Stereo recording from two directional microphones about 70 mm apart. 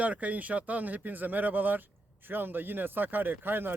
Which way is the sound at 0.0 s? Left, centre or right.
Right.